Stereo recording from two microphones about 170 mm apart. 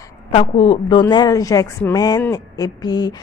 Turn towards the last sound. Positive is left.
turn(degrees=25)  # may be behind; listen again after turning